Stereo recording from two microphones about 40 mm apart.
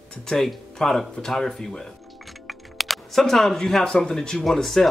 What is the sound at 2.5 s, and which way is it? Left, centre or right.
Music, centre.